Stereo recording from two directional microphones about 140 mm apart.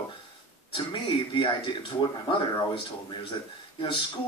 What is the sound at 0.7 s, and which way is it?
Speech, 40° left (ahead or behind).